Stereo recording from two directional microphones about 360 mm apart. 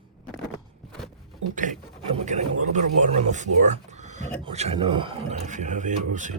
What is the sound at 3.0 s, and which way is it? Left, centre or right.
Speech, centre.